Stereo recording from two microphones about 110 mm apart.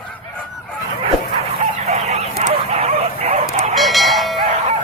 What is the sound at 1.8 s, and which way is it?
Dog, 80° right.